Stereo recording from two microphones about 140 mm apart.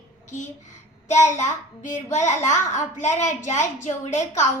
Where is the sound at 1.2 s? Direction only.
60° left (ahead or behind).